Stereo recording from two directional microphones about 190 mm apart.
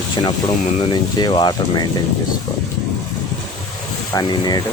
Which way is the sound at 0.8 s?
20° left (ahead or behind).